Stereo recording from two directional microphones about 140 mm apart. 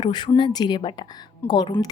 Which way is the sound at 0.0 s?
30° left (ahead or behind).